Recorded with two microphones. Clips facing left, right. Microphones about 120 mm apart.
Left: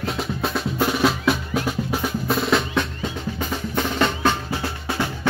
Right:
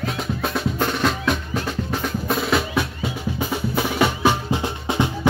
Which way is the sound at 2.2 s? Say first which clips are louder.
Even; centre (ahead or behind).